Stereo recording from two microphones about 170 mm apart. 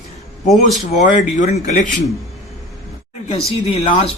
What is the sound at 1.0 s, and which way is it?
Speech, 45° left (ahead or behind).